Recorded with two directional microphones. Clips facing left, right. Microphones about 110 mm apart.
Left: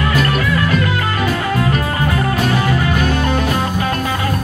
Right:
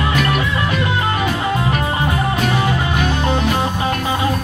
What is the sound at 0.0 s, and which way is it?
Music, 20° right (ahead or behind).